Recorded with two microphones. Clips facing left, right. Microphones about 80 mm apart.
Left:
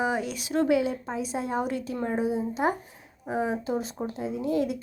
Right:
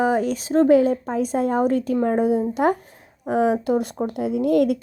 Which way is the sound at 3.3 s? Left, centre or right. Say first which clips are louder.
Right 9 dB; right.